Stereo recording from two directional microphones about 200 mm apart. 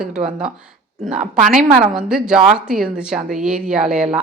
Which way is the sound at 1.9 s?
Centre (ahead or behind).